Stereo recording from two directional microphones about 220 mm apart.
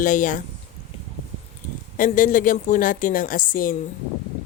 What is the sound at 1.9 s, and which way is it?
A woman's voice, 35° left (ahead or behind).